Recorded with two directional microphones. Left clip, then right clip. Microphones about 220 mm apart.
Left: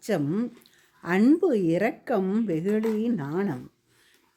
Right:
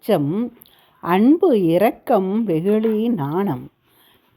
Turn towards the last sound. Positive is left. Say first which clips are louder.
# right 7 dB
turn(degrees=-15)  # may be behind; listen again after turning